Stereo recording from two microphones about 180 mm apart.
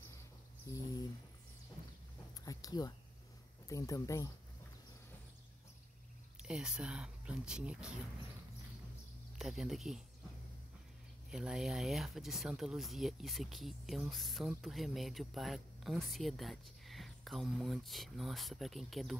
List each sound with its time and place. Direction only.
2.4 s a sound: 20° left (ahead or behind)
3.6 s speech: 20° left (ahead or behind)
6.4 s speech: 5° right (ahead or behind)
9.4 s speech: centre (ahead or behind)
11.2 s speech: 5° right (ahead or behind)